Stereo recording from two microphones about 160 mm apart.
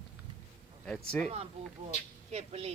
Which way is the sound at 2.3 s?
40° right (ahead or behind).